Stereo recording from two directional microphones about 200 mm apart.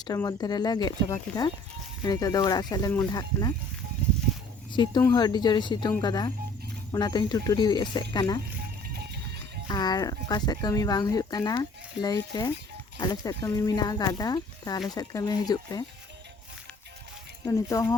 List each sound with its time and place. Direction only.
0.0 s speech: 20° left (ahead or behind)
4.9 s speech: 20° left (ahead or behind)
8.9 s music: 55° right (ahead or behind)
9.6 s speech: 20° left (ahead or behind)
17.4 s speech: 15° left (ahead or behind)